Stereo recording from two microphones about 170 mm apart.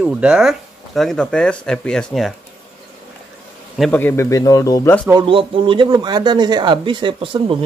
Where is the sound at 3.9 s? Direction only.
15° left (ahead or behind).